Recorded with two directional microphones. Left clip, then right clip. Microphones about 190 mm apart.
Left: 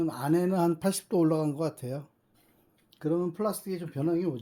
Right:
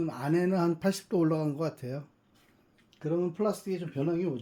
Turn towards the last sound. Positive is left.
turn(degrees=40)  # may be behind; listen again after turning